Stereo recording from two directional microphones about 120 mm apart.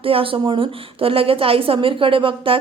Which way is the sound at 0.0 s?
50° right (ahead or behind).